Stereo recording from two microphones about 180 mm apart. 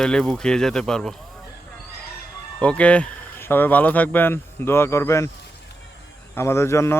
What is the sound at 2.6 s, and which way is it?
Speech, 5° left (ahead or behind).